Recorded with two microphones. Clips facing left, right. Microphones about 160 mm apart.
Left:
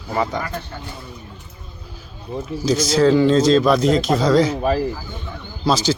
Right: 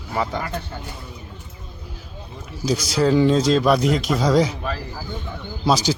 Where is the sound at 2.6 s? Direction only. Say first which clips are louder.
Left 4 dB; 10° right (ahead or behind).